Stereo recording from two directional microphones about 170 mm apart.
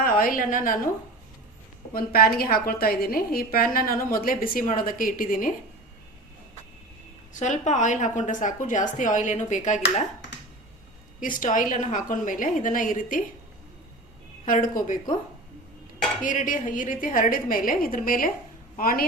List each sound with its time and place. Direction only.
0.0 s a sound: 55° left (ahead or behind)
0.3 s a woman's voice: 55° left (ahead or behind)
1.9 s a woman's voice: 60° left (ahead or behind)
7.3 s a woman's voice: 45° left (ahead or behind)
11.2 s a woman's voice: 50° left (ahead or behind)
14.4 s a woman's voice: 55° left (ahead or behind)
16.2 s a woman's voice: 50° left (ahead or behind)